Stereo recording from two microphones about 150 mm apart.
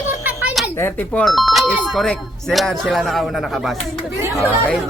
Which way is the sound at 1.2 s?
Centre (ahead or behind).